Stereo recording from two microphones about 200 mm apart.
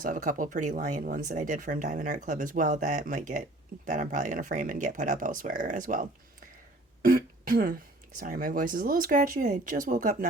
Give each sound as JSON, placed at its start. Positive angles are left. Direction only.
{"t": 0.0, "sound": "speech", "side_deg": -40}